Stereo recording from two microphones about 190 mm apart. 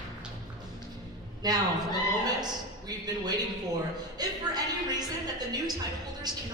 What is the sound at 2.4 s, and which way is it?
A man's voice, 20° right (ahead or behind).